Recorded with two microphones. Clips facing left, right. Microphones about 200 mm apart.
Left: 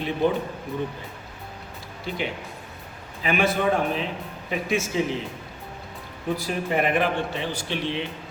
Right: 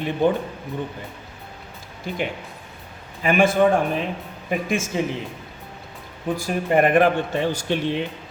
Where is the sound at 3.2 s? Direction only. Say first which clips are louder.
Right 5 dB; 50° right (ahead or behind).